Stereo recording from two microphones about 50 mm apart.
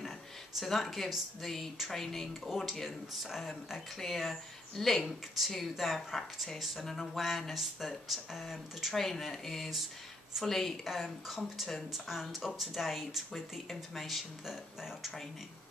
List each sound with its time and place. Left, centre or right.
0.6 s speech: centre
8.9 s a woman's voice: centre
10.8 s speech: centre